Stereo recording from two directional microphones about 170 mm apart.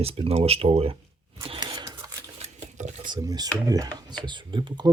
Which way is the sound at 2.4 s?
40° right (ahead or behind).